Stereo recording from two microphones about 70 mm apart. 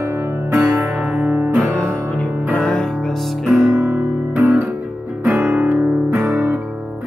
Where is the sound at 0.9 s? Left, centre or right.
Centre.